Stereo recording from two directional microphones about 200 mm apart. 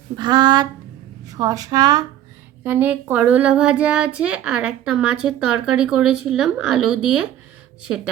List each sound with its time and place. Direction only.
0.2 s speech: 20° right (ahead or behind); by 7.3 s 5° right (ahead or behind)